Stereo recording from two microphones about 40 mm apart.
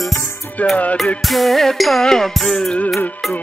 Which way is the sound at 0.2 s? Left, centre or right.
Left.